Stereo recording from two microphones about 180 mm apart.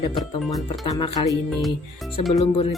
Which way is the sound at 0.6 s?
25° left (ahead or behind).